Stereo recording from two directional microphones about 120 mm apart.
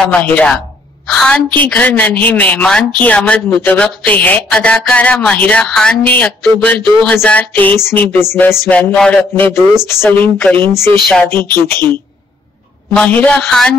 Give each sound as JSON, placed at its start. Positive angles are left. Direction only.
{"t": 0.0, "sound": "a woman's voice", "side_deg": 10}
{"t": 9.8, "sound": "a woman's voice", "side_deg": 20}